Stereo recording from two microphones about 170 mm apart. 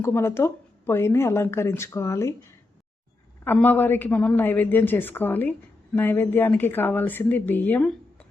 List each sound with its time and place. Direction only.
0.0 s a woman's voice: 15° left (ahead or behind)
3.4 s a woman's voice: 10° left (ahead or behind)